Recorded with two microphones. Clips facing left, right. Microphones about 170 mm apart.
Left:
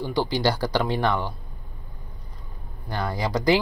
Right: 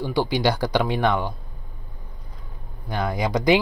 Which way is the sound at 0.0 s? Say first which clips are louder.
Right 2 dB; 10° right (ahead or behind).